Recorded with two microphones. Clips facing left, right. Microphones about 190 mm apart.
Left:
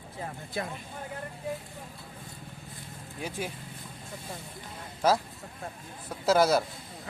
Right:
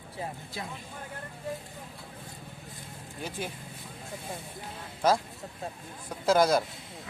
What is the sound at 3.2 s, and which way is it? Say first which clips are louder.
Speech: left 1 dB; 10° left (ahead or behind).